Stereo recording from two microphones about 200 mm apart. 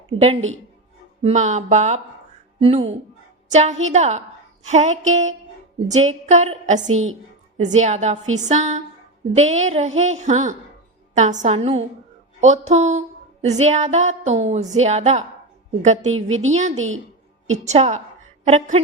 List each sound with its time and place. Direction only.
1.2 s a woman's voice: 35° right (ahead or behind)
16.7 s a woman's voice: 80° right
17.7 s a woman's voice: 35° right (ahead or behind)